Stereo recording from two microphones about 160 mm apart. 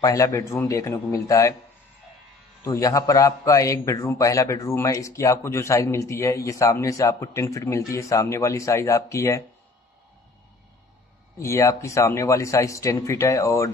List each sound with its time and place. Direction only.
0.0 s a man's voice: 20° left (ahead or behind)
2.6 s a man's voice: 20° left (ahead or behind)
11.3 s a man's voice: 20° left (ahead or behind)